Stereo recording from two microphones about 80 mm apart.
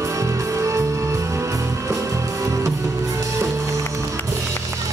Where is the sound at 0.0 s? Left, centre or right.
Right.